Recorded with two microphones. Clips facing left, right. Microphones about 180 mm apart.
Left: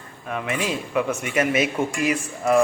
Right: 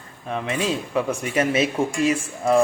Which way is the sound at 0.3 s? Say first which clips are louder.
Right 2 dB; 30° right (ahead or behind).